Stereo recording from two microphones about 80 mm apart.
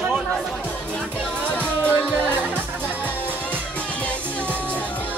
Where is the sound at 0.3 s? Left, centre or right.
Centre.